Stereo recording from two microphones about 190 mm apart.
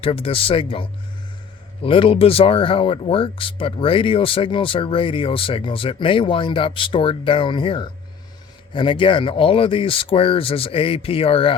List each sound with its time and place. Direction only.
0.0 s speech: 30° left (ahead or behind)